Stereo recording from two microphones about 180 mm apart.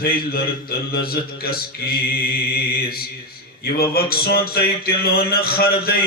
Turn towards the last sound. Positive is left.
turn(degrees=55)  # may be behind; listen again after turning